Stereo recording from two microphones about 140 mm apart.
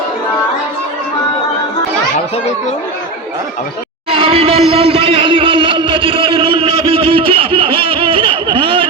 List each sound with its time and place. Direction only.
4.1 s speech: 40° right (ahead or behind)